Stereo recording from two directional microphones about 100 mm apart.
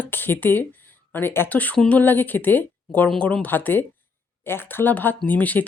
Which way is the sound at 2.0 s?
20° left (ahead or behind).